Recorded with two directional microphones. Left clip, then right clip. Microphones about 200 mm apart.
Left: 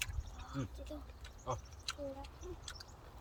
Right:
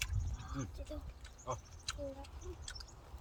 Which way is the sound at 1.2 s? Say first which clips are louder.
Left 1 dB; 15° left (ahead or behind).